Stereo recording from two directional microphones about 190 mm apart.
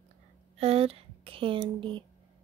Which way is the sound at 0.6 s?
30° right (ahead or behind).